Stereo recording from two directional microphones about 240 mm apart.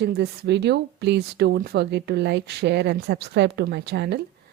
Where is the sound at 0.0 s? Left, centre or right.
Right.